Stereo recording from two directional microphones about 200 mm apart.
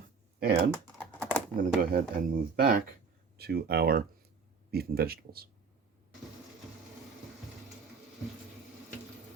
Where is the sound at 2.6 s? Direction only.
45° right (ahead or behind).